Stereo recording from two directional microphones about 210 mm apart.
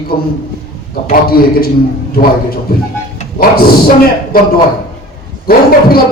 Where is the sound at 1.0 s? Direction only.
45° left (ahead or behind).